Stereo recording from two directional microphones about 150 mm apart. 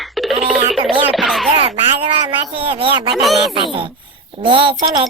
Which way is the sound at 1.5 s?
40° right (ahead or behind).